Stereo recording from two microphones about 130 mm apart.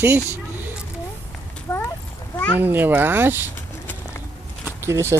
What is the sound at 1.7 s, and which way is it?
Horse, 20° left (ahead or behind).